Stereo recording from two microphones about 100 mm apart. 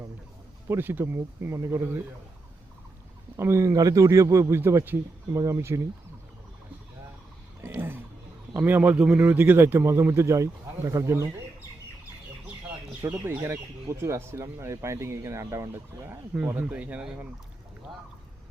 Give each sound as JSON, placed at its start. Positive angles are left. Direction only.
{"t": 0.7, "sound": "speech", "side_deg": -20}
{"t": 3.3, "sound": "speech", "side_deg": -25}
{"t": 7.7, "sound": "a sound", "side_deg": -20}
{"t": 8.5, "sound": "speech", "side_deg": -20}
{"t": 13.0, "sound": "speech", "side_deg": -25}
{"t": 16.3, "sound": "speech", "side_deg": -15}